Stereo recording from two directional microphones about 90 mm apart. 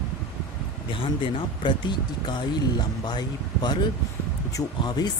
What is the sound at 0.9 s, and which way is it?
Speech, 70° left (ahead or behind).